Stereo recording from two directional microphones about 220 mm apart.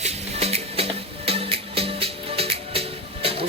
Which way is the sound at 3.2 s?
25° right (ahead or behind).